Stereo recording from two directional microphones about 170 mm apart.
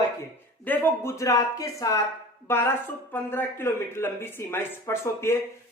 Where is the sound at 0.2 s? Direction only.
10° left (ahead or behind).